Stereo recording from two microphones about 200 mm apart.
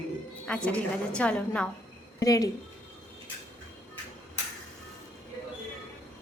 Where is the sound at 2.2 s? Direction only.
15° left (ahead or behind).